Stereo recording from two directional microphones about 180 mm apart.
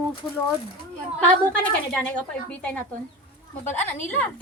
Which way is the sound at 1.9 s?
5° left (ahead or behind).